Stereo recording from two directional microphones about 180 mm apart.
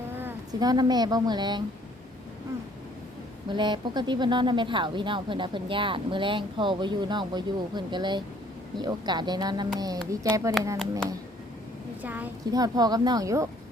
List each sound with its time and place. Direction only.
0.2 s speech: 15° right (ahead or behind)
3.5 s speech: 25° right (ahead or behind)
12.0 s a child's voice: 10° right (ahead or behind)
12.5 s speech: 20° right (ahead or behind)